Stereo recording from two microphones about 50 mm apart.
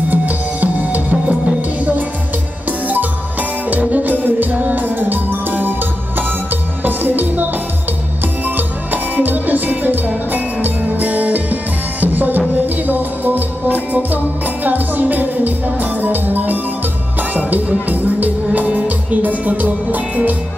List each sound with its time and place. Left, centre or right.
0.1 s music: right
3.9 s music: right
8.5 s music: right